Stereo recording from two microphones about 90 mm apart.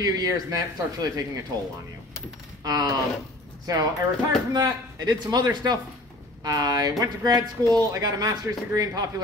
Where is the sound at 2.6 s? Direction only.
45° right (ahead or behind).